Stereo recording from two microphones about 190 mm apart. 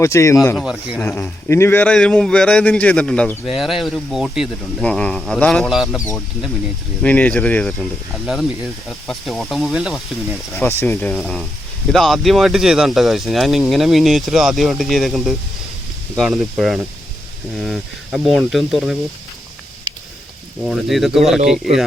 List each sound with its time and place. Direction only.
0.0 s speech: 15° left (ahead or behind)
0.5 s a man's voice: 5° right (ahead or behind)
1.0 s a man's voice: 10° left (ahead or behind)
7.0 s a man's voice: 5° left (ahead or behind)
10.6 s speech: 15° left (ahead or behind)
11.1 s a man's voice: centre (ahead or behind)
20.7 s a man's voice: centre (ahead or behind)